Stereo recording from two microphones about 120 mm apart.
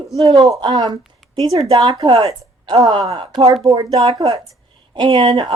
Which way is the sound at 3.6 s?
35° right (ahead or behind).